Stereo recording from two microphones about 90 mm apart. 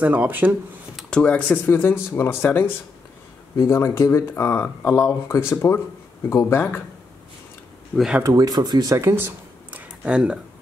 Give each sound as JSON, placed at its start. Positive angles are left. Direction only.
{"t": 0.0, "sound": "speech", "side_deg": -15}
{"t": 0.9, "sound": "speech", "side_deg": 10}
{"t": 8.2, "sound": "speech", "side_deg": -40}
{"t": 8.9, "sound": "speech", "side_deg": -30}
{"t": 9.7, "sound": "a sound", "side_deg": -15}